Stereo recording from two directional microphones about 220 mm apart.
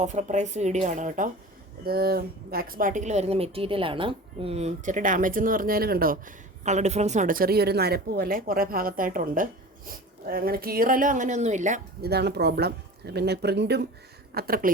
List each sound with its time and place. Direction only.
0.0 s a woman's voice: 30° right (ahead or behind)
12.1 s a woman's voice: 45° right (ahead or behind)